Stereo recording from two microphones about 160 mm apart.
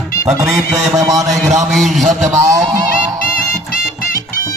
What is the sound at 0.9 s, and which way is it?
Speech, 20° right (ahead or behind).